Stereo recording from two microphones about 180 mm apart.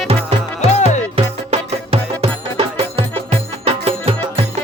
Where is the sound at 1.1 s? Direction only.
30° right (ahead or behind).